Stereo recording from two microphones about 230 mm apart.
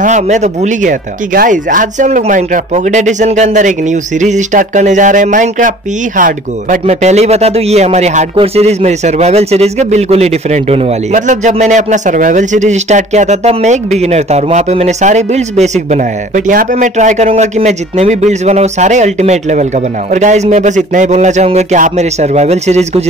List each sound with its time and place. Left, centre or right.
0.0 s speech: right